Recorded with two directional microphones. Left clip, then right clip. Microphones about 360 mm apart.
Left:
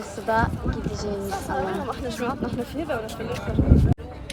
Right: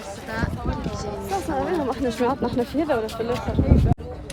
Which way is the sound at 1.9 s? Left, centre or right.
Right.